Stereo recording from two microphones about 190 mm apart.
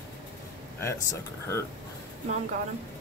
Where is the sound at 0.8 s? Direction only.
15° left (ahead or behind).